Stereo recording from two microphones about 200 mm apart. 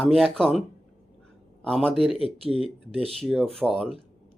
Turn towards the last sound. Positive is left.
turn(degrees=0)  # may be behind; listen again after turning